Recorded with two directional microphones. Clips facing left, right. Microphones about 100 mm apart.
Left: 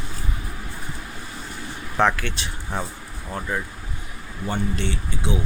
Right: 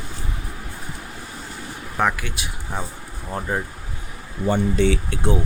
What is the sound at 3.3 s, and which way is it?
Speech, 25° right (ahead or behind).